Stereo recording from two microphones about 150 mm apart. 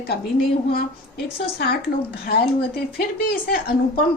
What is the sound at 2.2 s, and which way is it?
Speech, 85° left.